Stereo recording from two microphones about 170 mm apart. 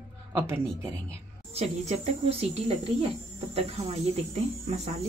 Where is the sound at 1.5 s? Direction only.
40° right (ahead or behind).